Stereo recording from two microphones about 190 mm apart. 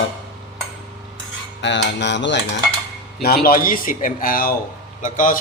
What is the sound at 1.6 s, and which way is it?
Cutlery, 70° left (ahead or behind).